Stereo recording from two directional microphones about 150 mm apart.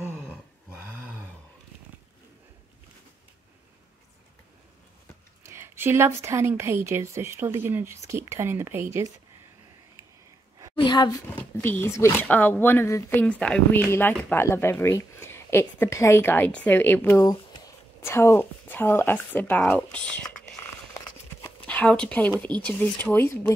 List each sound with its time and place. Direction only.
0.0 s a sound: 15° right (ahead or behind)
5.4 s a woman's voice: 15° right (ahead or behind)
10.8 s a sound: 30° left (ahead or behind)
11.3 s speech: 15° left (ahead or behind)
17.2 s speech: 25° left (ahead or behind); by 20.2 s 10° left (ahead or behind)
21.5 s speech: 10° left (ahead or behind)